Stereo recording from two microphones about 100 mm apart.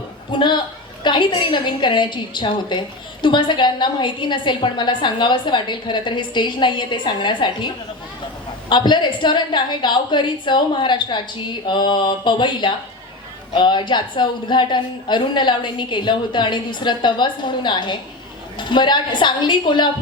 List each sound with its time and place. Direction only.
0.3 s a woman's voice: 50° left (ahead or behind)
8.7 s a woman's voice: 50° left (ahead or behind)